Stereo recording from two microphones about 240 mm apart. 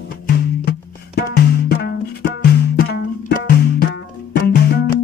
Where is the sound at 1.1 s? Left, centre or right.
Left.